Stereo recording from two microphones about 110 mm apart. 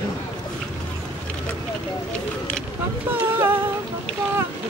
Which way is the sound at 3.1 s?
20° right (ahead or behind).